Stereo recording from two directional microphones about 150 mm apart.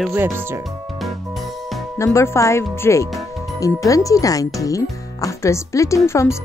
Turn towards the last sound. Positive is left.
turn(degrees=20)  # may be behind; listen again after turning